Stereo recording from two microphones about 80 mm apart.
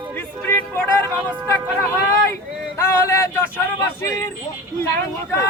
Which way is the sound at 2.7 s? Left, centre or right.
Left.